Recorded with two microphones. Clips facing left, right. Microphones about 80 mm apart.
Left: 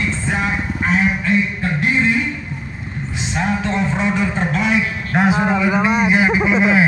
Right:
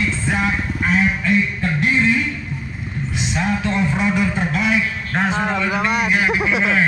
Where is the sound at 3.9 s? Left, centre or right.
Left.